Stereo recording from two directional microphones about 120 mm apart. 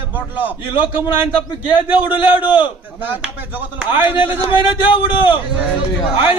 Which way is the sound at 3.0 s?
15° right (ahead or behind).